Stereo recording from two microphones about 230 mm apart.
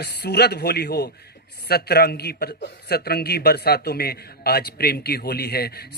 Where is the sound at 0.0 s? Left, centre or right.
Left.